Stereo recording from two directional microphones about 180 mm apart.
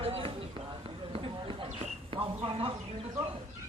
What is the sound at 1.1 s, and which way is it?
Clip-clop, 30° right (ahead or behind).